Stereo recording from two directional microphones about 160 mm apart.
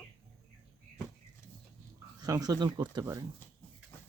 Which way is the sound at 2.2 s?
25° right (ahead or behind).